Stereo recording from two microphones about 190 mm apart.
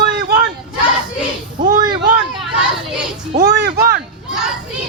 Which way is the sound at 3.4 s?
55° right (ahead or behind).